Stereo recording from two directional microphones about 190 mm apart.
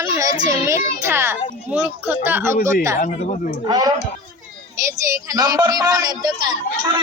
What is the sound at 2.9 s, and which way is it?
Speech, 40° left (ahead or behind).